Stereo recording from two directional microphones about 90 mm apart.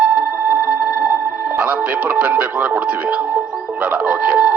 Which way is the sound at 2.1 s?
15° right (ahead or behind).